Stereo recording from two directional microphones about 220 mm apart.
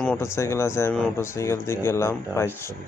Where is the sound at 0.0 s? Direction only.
10° left (ahead or behind).